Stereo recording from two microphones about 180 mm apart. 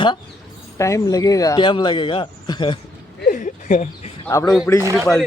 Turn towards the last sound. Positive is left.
turn(degrees=-15)  # may be behind; listen again after turning